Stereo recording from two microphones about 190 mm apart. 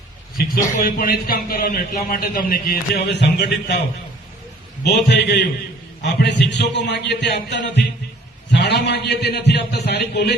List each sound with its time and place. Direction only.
0.3 s a man's voice: 50° left (ahead or behind)
4.8 s a man's voice: 60° left (ahead or behind)